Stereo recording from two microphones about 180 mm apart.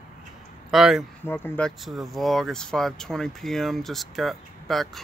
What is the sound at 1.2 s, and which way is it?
Speech, 10° left (ahead or behind).